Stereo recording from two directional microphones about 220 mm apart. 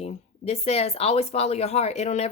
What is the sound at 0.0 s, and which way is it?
A woman's voice, 30° left (ahead or behind).